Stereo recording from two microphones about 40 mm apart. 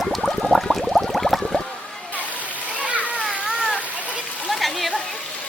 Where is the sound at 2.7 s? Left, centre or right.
Right.